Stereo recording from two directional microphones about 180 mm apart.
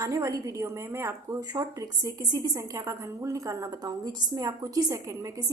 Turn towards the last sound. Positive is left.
turn(degrees=-20)  # may be behind; listen again after turning